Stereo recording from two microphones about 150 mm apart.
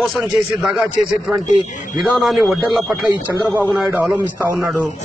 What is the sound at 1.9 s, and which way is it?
Speech, centre (ahead or behind).